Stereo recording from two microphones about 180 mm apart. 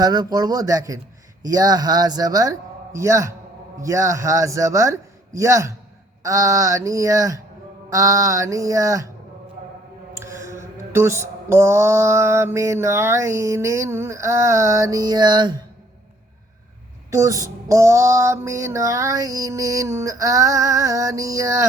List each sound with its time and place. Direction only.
0.0 s speech: 20° right (ahead or behind)
3.8 s mantra: 15° right (ahead or behind)
10.2 s mantra: 15° right (ahead or behind)
17.1 s mantra: 20° right (ahead or behind)